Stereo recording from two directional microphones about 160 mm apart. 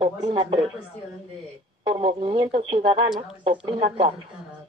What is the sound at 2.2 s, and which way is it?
Speech, 30° right (ahead or behind).